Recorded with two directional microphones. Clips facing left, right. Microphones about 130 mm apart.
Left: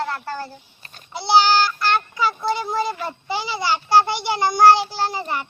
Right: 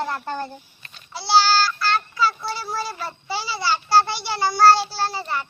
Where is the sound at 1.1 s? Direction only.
20° left (ahead or behind).